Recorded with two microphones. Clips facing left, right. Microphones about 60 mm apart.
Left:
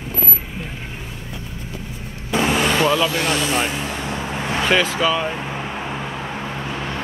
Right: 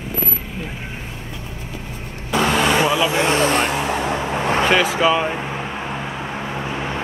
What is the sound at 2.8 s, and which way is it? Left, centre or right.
Speech, centre.